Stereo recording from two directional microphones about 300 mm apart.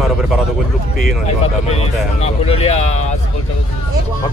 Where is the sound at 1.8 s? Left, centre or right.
Left.